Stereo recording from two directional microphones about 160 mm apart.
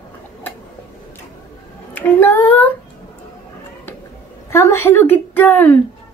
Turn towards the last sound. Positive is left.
turn(degrees=10)  # may be behind; listen again after turning